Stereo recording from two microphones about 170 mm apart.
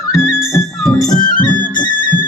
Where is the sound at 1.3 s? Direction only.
50° left (ahead or behind).